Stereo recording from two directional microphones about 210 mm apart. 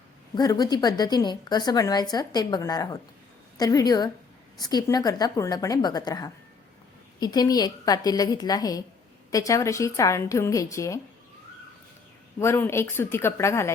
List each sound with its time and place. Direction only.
0.3 s a woman's voice: 20° left (ahead or behind)
12.4 s a woman's voice: 10° left (ahead or behind)